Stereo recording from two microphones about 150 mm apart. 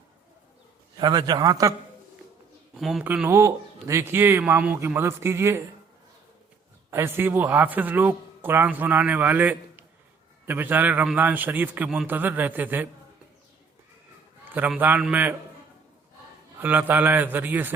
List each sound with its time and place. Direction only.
0.9 s a man's voice: 30° right (ahead or behind)
2.7 s speech: centre (ahead or behind)
3.0 s speech: 10° right (ahead or behind)
6.9 s speech: 15° right (ahead or behind)
14.5 s speech: 10° right (ahead or behind)
16.6 s speech: 15° right (ahead or behind)